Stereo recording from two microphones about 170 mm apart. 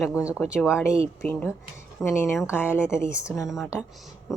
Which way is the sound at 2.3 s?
5° right (ahead or behind).